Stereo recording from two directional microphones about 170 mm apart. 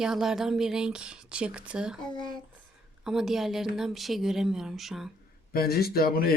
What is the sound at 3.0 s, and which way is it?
Speech, 5° right (ahead or behind).